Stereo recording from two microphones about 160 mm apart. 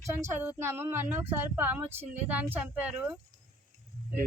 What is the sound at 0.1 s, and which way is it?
Speech, 15° right (ahead or behind).